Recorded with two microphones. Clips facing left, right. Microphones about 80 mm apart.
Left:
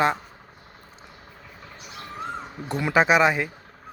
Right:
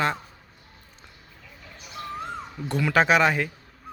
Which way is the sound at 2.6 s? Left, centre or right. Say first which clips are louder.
Even; left.